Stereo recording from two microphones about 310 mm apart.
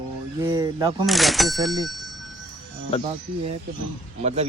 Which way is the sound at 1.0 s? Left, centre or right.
Centre.